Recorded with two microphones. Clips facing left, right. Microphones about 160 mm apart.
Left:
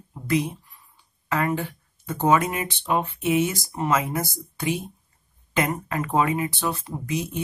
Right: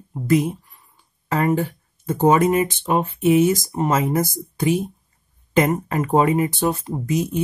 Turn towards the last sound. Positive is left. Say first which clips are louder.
# right 6 dB
turn(degrees=-40)  # may be behind; listen again after turning